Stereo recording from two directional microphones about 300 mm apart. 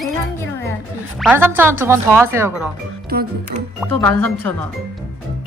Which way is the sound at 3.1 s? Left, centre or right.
Right.